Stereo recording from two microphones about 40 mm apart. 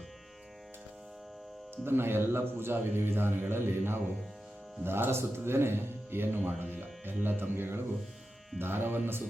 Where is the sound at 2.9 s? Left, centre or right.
Right.